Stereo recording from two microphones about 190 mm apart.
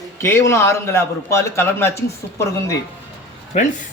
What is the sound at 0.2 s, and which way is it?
A man's voice, 15° left (ahead or behind).